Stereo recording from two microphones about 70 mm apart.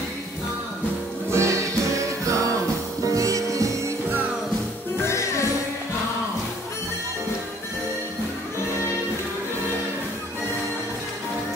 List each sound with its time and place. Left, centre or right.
1.3 s music: right
4.9 s music: left